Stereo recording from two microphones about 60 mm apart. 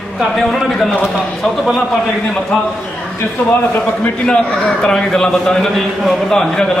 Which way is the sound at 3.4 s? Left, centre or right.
Left.